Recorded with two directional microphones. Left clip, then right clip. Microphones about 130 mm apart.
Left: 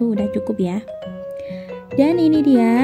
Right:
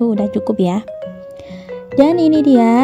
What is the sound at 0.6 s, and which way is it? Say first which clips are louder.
Speech: right 6 dB; 40° right (ahead or behind).